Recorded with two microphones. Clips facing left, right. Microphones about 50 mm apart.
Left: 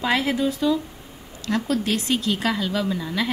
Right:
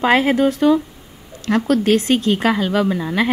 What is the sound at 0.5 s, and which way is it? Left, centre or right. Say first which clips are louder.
Speech: right 7 dB; right.